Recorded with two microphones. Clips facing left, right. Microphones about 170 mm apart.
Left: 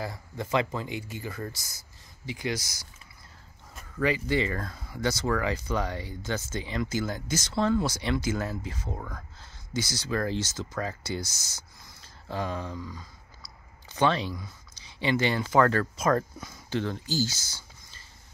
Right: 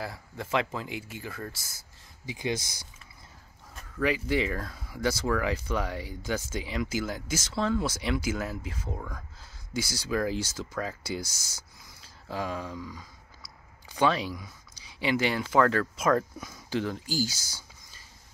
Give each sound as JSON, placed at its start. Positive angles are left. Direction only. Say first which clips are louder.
{"t": 0.0, "sound": "speech", "louder": "left 2 dB", "side_deg": -5}
{"t": 2.2, "sound": "speech", "louder": "even", "side_deg": -20}
{"t": 3.7, "sound": "speech", "louder": "left 1 dB", "side_deg": -5}
{"t": 9.8, "sound": "speech", "louder": "even", "side_deg": -10}